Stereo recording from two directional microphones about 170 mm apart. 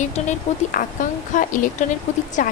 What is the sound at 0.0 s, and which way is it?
Speech, 45° left (ahead or behind).